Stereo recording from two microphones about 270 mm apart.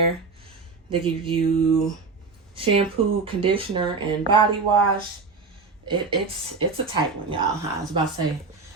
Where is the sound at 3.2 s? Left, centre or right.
Centre.